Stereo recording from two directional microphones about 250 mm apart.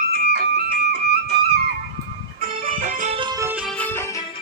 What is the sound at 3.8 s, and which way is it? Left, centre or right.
Music, centre.